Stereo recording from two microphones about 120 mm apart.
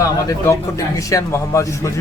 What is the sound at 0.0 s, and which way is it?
Speech, 25° left (ahead or behind).